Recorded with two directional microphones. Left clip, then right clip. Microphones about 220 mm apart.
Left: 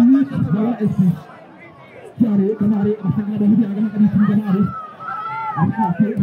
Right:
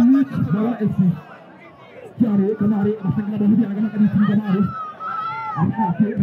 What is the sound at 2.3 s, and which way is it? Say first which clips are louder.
Speech: left 1 dB; 25° right (ahead or behind).